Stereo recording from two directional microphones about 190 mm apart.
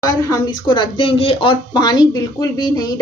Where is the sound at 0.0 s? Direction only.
20° left (ahead or behind).